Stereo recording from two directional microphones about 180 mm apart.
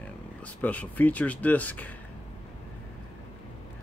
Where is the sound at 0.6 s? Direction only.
10° left (ahead or behind).